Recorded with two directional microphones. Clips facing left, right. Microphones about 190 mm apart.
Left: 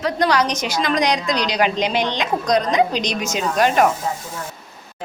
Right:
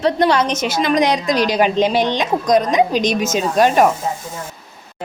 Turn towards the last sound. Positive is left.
turn(degrees=-20)  # may be behind; listen again after turning